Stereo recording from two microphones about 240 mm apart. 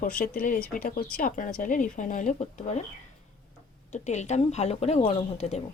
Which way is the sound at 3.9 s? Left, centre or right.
Left.